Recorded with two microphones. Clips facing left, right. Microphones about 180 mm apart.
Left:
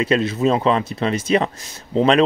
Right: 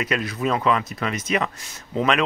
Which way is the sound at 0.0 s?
25° left (ahead or behind).